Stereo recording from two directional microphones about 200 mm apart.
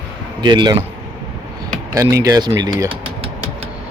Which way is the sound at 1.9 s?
15° right (ahead or behind).